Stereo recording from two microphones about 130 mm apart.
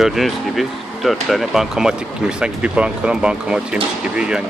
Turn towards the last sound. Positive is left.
turn(degrees=-5)  # may be behind; listen again after turning